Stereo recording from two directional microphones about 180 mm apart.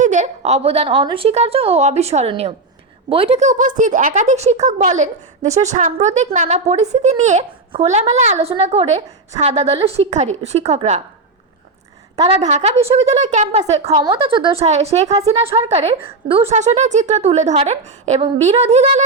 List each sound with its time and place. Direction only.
0.0 s a woman's voice: 45° right (ahead or behind)
12.1 s a woman's voice: 40° right (ahead or behind)